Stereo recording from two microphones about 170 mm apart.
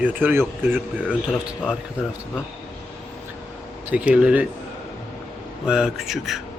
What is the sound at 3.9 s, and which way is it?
Speech, 5° right (ahead or behind).